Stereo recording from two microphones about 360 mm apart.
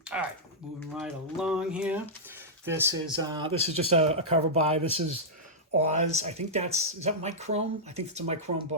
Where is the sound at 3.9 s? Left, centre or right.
Centre.